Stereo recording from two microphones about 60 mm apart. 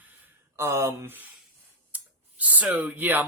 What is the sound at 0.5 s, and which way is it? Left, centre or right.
Speech, right.